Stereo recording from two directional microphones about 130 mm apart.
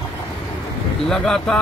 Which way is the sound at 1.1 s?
5° left (ahead or behind).